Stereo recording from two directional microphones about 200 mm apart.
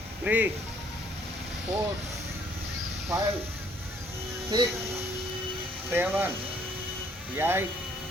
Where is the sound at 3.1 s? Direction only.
15° right (ahead or behind).